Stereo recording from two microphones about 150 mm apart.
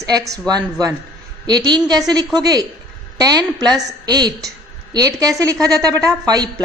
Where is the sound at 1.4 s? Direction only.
30° right (ahead or behind).